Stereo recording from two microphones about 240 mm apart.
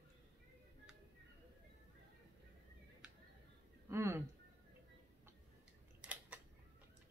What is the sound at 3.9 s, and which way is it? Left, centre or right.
Speech, centre.